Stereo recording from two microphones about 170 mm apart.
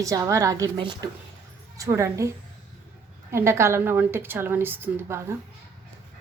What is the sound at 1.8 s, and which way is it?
Speech, 15° right (ahead or behind).